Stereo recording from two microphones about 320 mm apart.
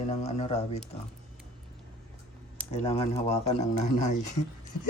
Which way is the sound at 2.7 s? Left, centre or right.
Centre.